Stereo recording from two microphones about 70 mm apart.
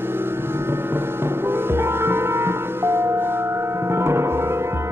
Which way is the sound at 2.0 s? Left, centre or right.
Right.